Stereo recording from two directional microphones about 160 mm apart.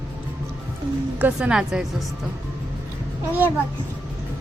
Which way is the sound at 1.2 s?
10° right (ahead or behind).